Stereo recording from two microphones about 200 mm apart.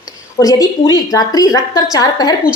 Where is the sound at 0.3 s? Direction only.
20° left (ahead or behind).